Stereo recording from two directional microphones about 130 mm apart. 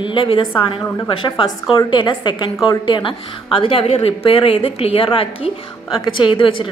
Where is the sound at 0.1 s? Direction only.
40° left (ahead or behind).